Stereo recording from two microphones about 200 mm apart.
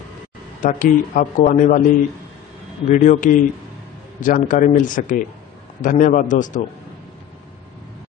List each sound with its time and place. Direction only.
0.6 s speech: 40° left (ahead or behind)
2.9 s speech: 40° left (ahead or behind)